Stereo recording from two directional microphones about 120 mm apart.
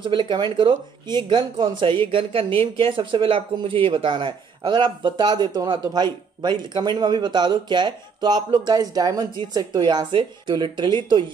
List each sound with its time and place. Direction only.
0.0 s speech: 40° right (ahead or behind)